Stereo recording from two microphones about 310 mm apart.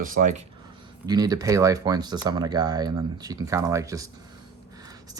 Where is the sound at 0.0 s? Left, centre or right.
Right.